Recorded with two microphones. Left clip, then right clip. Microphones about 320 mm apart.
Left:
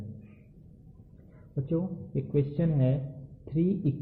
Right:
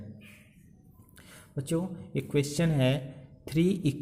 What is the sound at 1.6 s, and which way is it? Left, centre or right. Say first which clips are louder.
A man's voice: even; right.